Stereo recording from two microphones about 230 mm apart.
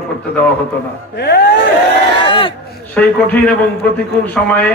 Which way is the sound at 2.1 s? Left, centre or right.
Left.